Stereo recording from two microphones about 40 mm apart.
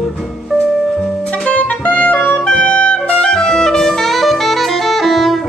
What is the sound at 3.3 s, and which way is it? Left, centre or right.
Clarinet, centre.